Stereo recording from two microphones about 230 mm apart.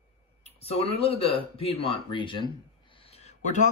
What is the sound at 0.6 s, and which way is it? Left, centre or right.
Speech, left.